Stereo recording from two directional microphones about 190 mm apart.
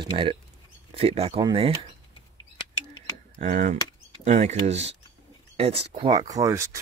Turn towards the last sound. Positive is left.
turn(degrees=-15)  # may be behind; listen again after turning